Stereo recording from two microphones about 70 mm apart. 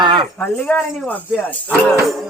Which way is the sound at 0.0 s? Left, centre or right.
Right.